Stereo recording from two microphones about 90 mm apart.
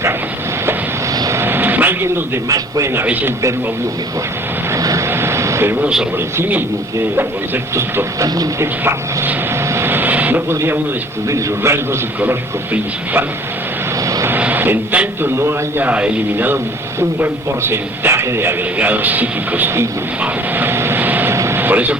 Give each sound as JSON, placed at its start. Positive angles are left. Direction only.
{"t": 1.1, "sound": "vehicle", "side_deg": -45}
{"t": 1.4, "sound": "vehicle", "side_deg": -25}
{"t": 2.5, "sound": "a man's voice", "side_deg": -40}
{"t": 2.9, "sound": "a man's voice", "side_deg": -20}
{"t": 4.7, "sound": "vehicle", "side_deg": -35}
{"t": 5.0, "sound": "vehicle", "side_deg": -25}
{"t": 6.3, "sound": "a man's voice", "side_deg": -25}
{"t": 9.7, "sound": "vehicle", "side_deg": -25}
{"t": 11.3, "sound": "a man's voice", "side_deg": -30}
{"t": 14.3, "sound": "a man's voice", "side_deg": -20}
{"t": 15.9, "sound": "a man's voice", "side_deg": -15}
{"t": 20.2, "sound": "vehicle", "side_deg": -20}